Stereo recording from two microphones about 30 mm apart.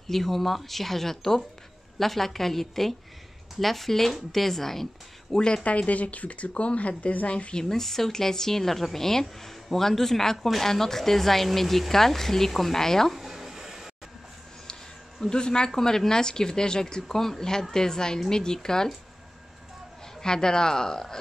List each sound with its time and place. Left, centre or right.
0.1 s speech: centre
5.3 s speech: left
5.6 s speech: left
7.6 s speech: centre
13.1 s a sound: centre
15.2 s speech: left
20.2 s speech: left